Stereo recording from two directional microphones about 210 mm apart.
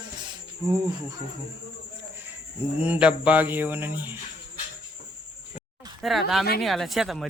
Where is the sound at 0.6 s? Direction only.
15° right (ahead or behind).